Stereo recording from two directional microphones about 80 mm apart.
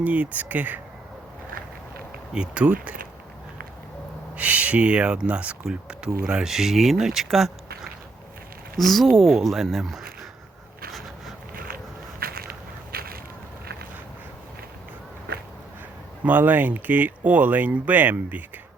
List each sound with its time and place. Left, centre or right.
0.0 s speech: centre
2.3 s speech: centre
4.4 s speech: centre
8.8 s speech: centre
16.2 s speech: right